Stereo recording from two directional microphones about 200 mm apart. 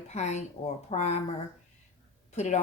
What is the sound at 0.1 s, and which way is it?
A woman's voice, 35° left (ahead or behind).